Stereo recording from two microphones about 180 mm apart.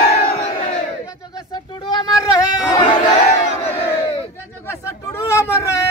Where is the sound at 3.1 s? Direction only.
40° left (ahead or behind).